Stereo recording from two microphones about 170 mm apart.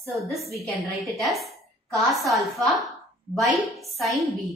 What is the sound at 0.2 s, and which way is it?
Speech, centre (ahead or behind).